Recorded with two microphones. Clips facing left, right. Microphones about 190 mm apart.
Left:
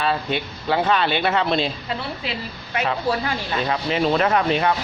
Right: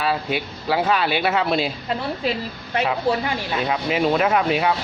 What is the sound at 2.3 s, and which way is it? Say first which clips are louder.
Speech: right 7 dB; 45° right (ahead or behind).